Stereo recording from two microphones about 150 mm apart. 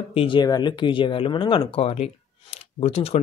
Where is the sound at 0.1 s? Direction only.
35° left (ahead or behind).